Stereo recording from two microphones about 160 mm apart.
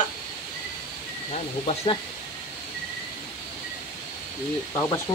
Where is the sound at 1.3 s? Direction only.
45° left (ahead or behind).